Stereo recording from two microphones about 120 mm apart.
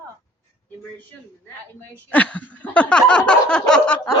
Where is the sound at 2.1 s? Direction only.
10° left (ahead or behind).